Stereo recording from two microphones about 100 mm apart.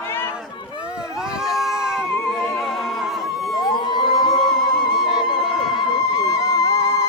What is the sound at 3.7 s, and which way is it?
Music, 45° left (ahead or behind).